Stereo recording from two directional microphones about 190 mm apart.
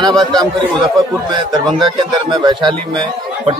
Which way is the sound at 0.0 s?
25° right (ahead or behind).